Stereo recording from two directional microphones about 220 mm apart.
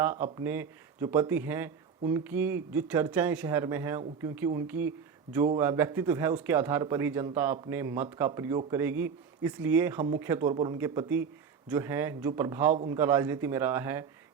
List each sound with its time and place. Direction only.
0.0 s speech: 10° right (ahead or behind)